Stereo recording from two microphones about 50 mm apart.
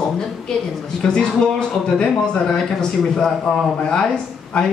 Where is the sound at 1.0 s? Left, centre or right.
Centre.